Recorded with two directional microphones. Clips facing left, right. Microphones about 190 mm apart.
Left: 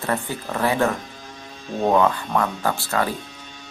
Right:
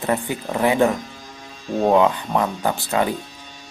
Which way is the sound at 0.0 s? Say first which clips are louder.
Right 3 dB; 15° right (ahead or behind).